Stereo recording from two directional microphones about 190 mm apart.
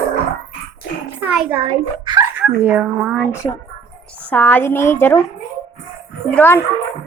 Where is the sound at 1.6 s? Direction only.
25° right (ahead or behind).